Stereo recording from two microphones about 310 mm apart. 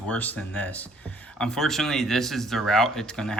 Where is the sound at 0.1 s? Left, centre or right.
Centre.